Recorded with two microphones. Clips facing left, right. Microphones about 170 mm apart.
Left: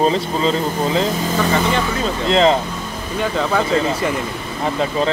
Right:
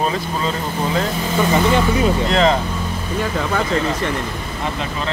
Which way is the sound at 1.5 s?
15° right (ahead or behind).